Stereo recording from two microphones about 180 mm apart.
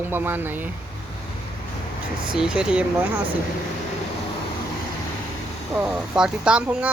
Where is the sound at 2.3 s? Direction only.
5° right (ahead or behind).